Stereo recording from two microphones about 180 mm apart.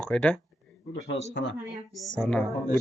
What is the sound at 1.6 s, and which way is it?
Speech, centre (ahead or behind).